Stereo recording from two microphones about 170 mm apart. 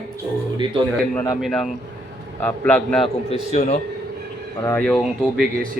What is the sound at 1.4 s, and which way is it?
A man's voice, centre (ahead or behind).